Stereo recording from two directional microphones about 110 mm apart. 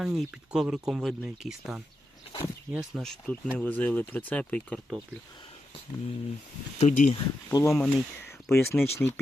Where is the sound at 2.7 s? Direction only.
5° right (ahead or behind).